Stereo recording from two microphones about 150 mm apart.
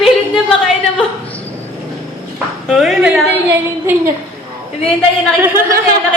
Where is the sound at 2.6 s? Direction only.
Centre (ahead or behind).